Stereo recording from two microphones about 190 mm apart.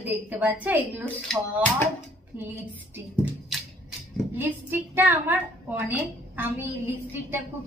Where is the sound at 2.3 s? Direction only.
10° right (ahead or behind).